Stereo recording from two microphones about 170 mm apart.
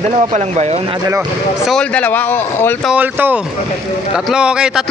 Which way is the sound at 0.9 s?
20° right (ahead or behind).